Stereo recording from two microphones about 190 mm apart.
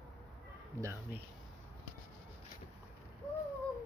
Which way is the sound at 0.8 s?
10° right (ahead or behind).